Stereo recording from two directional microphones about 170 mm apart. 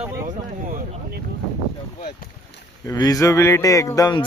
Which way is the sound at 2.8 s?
20° left (ahead or behind).